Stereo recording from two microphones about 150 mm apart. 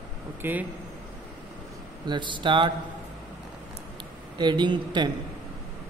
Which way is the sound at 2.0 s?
30° right (ahead or behind).